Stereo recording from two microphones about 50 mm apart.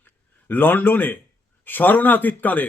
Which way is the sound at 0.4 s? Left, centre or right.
Left.